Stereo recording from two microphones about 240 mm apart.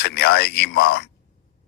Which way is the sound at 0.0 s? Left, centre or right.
Left.